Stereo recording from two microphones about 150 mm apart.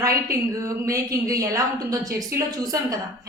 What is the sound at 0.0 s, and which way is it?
A woman's voice, 20° right (ahead or behind).